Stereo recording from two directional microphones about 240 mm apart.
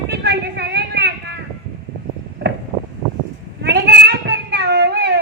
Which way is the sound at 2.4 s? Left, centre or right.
Right.